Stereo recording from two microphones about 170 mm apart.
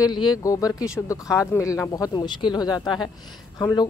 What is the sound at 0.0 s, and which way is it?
A woman's voice, 25° left (ahead or behind).